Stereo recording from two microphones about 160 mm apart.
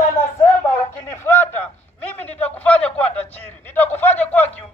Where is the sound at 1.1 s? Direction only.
15° left (ahead or behind).